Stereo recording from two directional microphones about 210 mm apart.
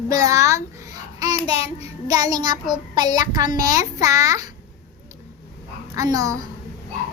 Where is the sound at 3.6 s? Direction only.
15° right (ahead or behind).